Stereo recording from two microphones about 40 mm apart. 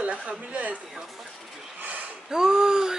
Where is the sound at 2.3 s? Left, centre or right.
Centre.